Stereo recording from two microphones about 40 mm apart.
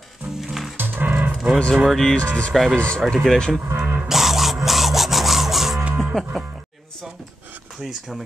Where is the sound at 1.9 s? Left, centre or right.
Centre.